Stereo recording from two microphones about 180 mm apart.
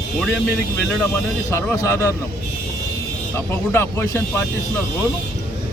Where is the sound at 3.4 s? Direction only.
15° left (ahead or behind).